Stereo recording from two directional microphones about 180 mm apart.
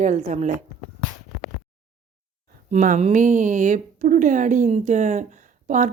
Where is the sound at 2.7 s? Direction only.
45° right (ahead or behind).